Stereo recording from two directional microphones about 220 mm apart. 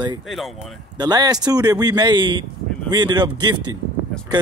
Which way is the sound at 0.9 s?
20° right (ahead or behind).